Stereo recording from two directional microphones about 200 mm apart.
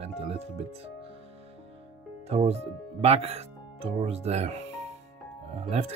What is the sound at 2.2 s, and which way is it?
Speech, 30° right (ahead or behind).